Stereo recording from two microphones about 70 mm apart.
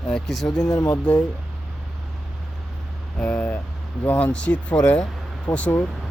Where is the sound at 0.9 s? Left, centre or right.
Centre.